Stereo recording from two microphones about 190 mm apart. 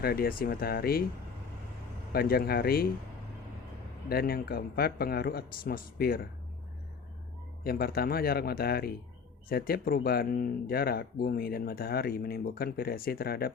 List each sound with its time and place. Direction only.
0.0 s speech: 55° left (ahead or behind)
2.1 s speech: 55° left (ahead or behind)
4.1 s speech: 55° left (ahead or behind)
7.6 s speech: 55° left (ahead or behind)